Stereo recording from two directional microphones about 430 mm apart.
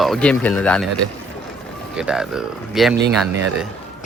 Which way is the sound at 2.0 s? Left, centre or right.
Centre.